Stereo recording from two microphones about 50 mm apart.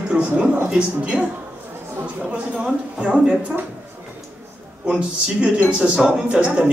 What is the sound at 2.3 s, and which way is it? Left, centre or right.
Speech, right.